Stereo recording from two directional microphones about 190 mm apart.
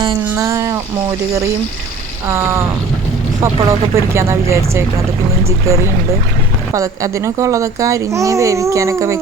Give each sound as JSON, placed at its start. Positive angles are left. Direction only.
{"t": 0.0, "sound": "speech", "side_deg": -20}
{"t": 2.2, "sound": "speech", "side_deg": -15}
{"t": 6.7, "sound": "speech", "side_deg": -15}